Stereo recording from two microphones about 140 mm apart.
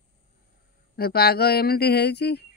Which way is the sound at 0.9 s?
90° left.